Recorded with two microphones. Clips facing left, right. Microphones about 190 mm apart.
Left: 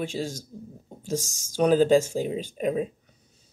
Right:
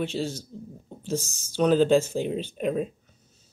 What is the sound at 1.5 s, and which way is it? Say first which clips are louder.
Speech: left 1 dB; 10° left (ahead or behind).